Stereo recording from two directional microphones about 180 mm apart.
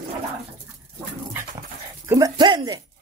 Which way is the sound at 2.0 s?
20° right (ahead or behind).